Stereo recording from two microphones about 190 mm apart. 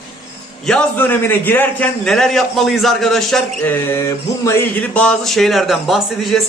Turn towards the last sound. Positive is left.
turn(degrees=0)  # may be behind; listen again after turning